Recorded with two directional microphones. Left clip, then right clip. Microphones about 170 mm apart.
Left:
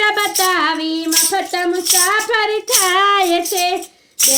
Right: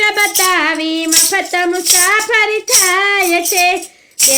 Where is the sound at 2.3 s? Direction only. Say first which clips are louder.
Right 3 dB; 25° right (ahead or behind).